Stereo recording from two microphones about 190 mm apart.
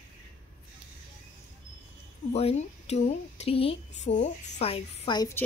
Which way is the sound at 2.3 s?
35° left (ahead or behind).